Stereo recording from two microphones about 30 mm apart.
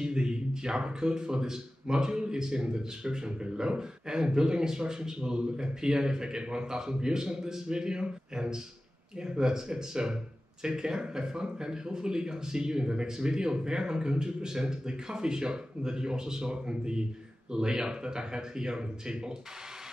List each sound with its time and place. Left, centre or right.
0.0 s a man's voice: right